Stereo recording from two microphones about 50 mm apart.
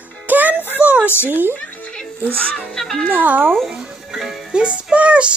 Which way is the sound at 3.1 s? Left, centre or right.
Right.